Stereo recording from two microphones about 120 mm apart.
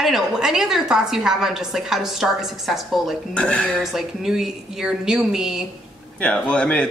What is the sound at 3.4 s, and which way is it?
Speech, 10° left (ahead or behind).